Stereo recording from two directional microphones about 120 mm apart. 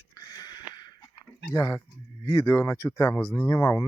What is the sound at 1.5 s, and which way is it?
Speech, 30° left (ahead or behind).